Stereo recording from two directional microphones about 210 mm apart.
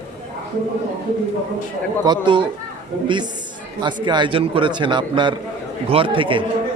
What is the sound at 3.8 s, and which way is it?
A man's voice, 20° right (ahead or behind).